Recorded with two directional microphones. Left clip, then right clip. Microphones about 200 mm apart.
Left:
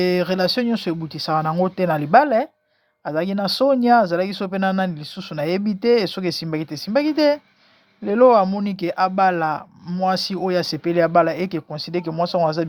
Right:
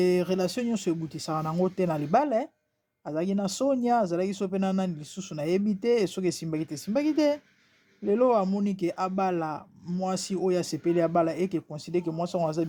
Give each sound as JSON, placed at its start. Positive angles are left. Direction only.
{"t": 0.0, "sound": "speech", "side_deg": 15}